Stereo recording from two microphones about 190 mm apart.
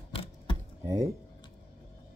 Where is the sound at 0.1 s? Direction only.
30° left (ahead or behind).